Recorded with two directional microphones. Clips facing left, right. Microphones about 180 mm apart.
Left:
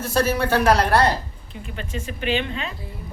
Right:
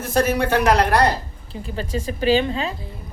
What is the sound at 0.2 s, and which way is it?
Speech, 15° right (ahead or behind).